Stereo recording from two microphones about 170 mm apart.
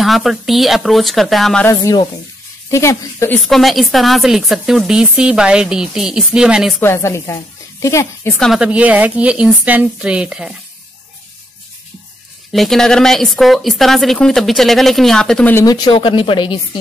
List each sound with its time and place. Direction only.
0.0 s a woman's voice: centre (ahead or behind)
1.7 s speech: 20° left (ahead or behind)
3.3 s a woman's voice: centre (ahead or behind)
6.8 s a woman's voice: 15° left (ahead or behind)
8.4 s speech: centre (ahead or behind)
12.5 s a woman's voice: centre (ahead or behind)
15.5 s speech: 20° left (ahead or behind)